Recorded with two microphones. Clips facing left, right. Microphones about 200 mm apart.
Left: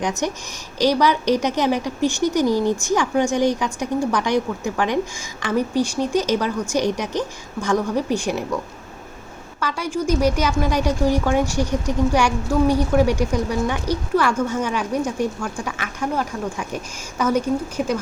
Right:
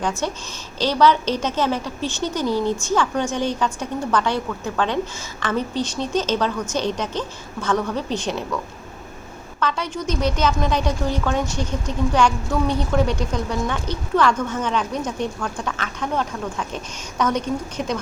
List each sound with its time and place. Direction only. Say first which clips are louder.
0.0 s a woman's voice: left 1 dB; 15° left (ahead or behind)
9.6 s a woman's voice: left 1 dB; 10° left (ahead or behind)